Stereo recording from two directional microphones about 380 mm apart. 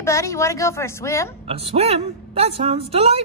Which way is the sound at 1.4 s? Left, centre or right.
Centre.